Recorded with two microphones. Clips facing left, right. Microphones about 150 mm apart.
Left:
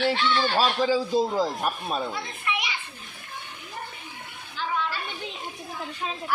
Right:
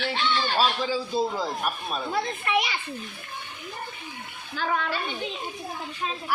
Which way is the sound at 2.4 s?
45° right (ahead or behind).